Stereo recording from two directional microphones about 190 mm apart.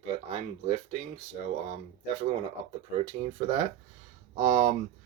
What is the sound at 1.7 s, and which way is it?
Speech, 35° right (ahead or behind).